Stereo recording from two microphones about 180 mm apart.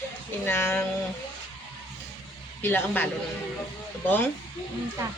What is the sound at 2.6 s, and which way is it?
Speech, 10° left (ahead or behind).